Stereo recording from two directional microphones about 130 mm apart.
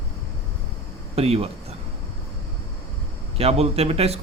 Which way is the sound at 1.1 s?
50° right (ahead or behind).